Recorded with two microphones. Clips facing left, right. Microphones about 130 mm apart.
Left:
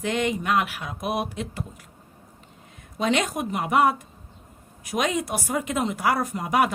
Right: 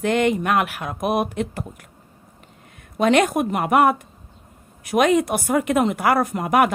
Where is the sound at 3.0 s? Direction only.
55° right (ahead or behind).